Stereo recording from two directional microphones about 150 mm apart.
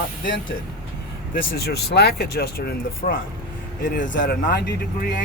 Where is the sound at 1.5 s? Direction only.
90° left.